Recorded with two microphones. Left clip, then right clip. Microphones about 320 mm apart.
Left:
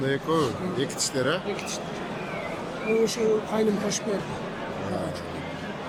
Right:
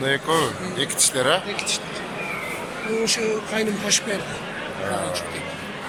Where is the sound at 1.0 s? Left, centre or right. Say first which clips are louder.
Right 8 dB; centre.